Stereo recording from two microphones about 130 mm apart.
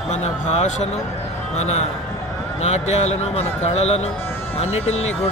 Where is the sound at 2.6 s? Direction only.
55° left (ahead or behind).